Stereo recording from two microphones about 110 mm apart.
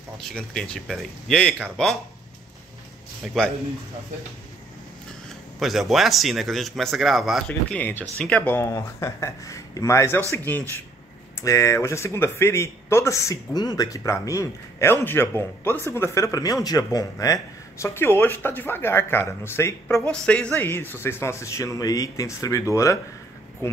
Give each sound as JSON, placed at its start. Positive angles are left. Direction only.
{"t": 0.2, "sound": "speech", "side_deg": 5}
{"t": 3.4, "sound": "speech", "side_deg": 5}
{"t": 5.6, "sound": "speech", "side_deg": 0}
{"t": 7.4, "sound": "speech", "side_deg": 15}
{"t": 8.6, "sound": "speech", "side_deg": 25}
{"t": 11.3, "sound": "speech", "side_deg": 30}
{"t": 17.8, "sound": "speech", "side_deg": 20}
{"t": 20.1, "sound": "speech", "side_deg": 10}